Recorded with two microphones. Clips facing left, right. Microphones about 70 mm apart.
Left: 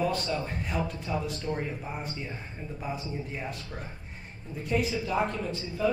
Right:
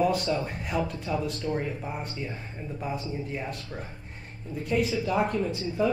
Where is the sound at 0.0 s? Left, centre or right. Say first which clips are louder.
Right 4 dB; centre.